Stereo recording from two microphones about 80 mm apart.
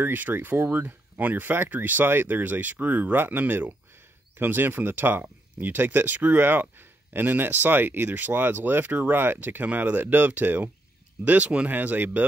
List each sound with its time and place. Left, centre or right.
0.0 s speech: right